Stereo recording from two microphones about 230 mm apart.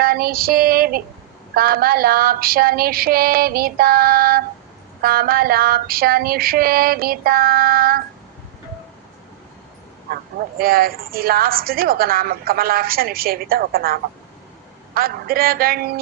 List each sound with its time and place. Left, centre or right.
0.0 s a woman's voice: right
10.6 s a woman's voice: right